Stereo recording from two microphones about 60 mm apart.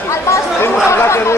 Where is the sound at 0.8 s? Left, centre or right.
Left.